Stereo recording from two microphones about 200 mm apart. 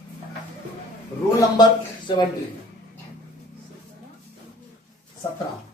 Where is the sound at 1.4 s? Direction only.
20° left (ahead or behind).